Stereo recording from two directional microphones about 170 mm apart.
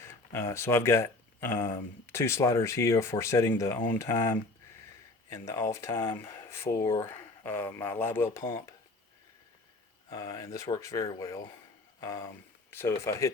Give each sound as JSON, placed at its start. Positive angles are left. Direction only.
{"t": 0.0, "sound": "speech", "side_deg": 15}
{"t": 10.1, "sound": "speech", "side_deg": 20}
{"t": 11.9, "sound": "a sound", "side_deg": 20}
{"t": 13.1, "sound": "speech", "side_deg": 20}